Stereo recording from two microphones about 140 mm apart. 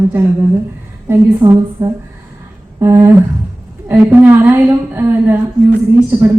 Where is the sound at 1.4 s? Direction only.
25° right (ahead or behind).